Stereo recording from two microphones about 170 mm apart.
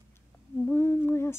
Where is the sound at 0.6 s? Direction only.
10° left (ahead or behind).